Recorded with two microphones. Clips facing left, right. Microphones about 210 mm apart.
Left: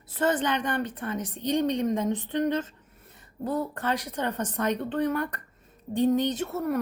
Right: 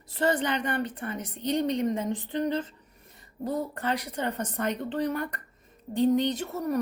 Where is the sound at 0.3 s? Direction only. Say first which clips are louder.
Left 1 dB; 10° right (ahead or behind).